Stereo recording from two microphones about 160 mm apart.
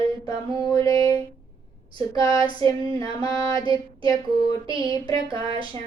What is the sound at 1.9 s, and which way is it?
Child singing, 30° right (ahead or behind).